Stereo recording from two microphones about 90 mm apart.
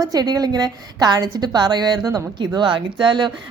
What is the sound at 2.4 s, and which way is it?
Speech, 60° right (ahead or behind).